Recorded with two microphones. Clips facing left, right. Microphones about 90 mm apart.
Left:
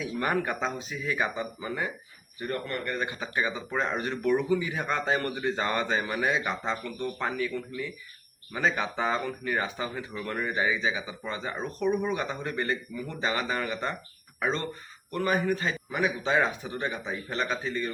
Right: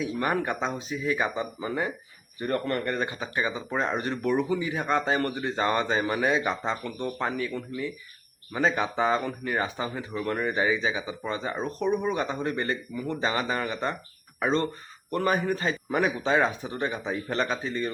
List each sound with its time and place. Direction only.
0.2 s a man's voice: 20° right (ahead or behind); by 3.1 s 35° right (ahead or behind)
3.2 s a man's voice: 20° right (ahead or behind)